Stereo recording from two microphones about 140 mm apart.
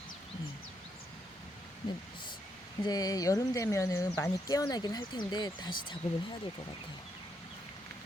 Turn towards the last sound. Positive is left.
turn(degrees=35)  # may be behind; listen again after turning